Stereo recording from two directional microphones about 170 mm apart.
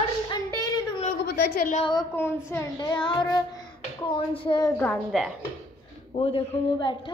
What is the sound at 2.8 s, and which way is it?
Child singing, 30° left (ahead or behind).